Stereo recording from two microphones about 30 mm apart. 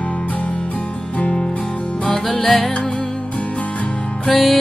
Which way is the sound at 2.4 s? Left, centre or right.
Centre.